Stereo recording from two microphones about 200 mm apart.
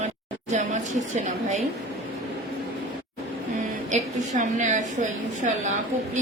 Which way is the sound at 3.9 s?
35° right (ahead or behind).